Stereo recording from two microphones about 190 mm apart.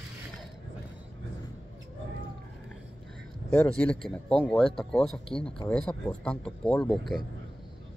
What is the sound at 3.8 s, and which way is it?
Speech, 5° left (ahead or behind).